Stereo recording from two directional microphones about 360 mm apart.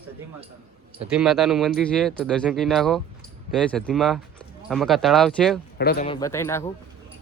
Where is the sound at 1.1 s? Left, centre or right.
Centre.